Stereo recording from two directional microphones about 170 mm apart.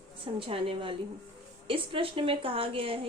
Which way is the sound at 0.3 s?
30° right (ahead or behind).